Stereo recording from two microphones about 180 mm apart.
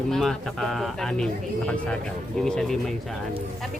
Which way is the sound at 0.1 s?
Centre (ahead or behind).